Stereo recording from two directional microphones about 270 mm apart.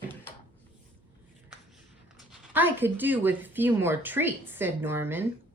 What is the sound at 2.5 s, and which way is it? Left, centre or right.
Speech, centre.